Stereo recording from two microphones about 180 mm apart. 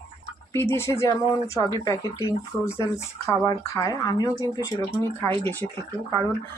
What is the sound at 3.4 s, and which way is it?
Speech, 15° left (ahead or behind).